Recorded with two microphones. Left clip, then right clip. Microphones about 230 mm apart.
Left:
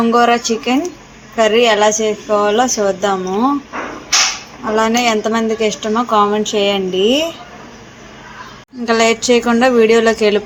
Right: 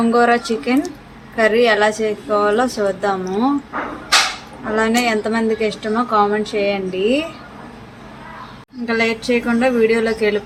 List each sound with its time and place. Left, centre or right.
0.0 s a woman's voice: centre
4.8 s a woman's voice: centre
8.9 s a woman's voice: centre